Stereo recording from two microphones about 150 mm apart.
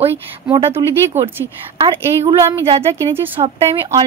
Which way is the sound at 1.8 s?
35° right (ahead or behind).